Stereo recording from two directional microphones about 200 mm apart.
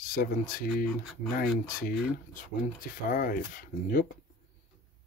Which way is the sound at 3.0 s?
45° left (ahead or behind).